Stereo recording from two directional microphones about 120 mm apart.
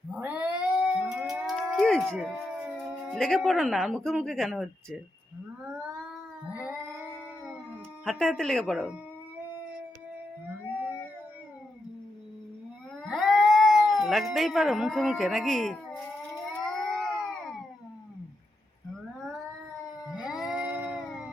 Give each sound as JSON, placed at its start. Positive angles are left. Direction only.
{"t": 0.1, "sound": "cat", "side_deg": -15}
{"t": 1.0, "sound": "a sound", "side_deg": -5}
{"t": 3.2, "sound": "speech", "side_deg": 0}
{"t": 6.5, "sound": "cat", "side_deg": -10}
{"t": 8.0, "sound": "speech", "side_deg": -5}
{"t": 10.7, "sound": "a sound", "side_deg": -10}
{"t": 13.0, "sound": "speech", "side_deg": 0}
{"t": 16.3, "sound": "a sound", "side_deg": 0}
{"t": 20.1, "sound": "cat", "side_deg": -5}